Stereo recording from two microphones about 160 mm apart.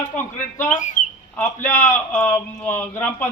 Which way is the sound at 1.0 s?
55° left (ahead or behind).